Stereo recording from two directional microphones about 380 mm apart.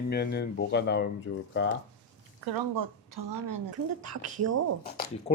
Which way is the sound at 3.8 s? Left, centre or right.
Right.